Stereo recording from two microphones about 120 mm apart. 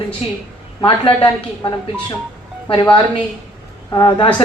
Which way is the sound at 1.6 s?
35° left (ahead or behind).